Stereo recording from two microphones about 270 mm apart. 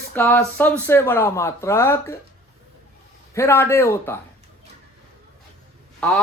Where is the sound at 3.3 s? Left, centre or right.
Centre.